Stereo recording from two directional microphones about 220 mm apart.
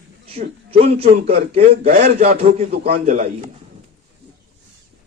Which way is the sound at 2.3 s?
30° right (ahead or behind).